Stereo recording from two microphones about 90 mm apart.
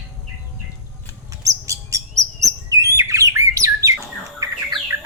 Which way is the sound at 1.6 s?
35° right (ahead or behind).